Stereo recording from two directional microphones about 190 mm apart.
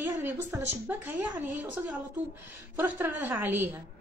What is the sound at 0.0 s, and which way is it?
A woman's voice, 10° right (ahead or behind).